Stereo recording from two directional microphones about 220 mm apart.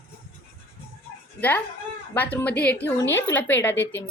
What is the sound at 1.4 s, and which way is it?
A child's voice, 10° left (ahead or behind).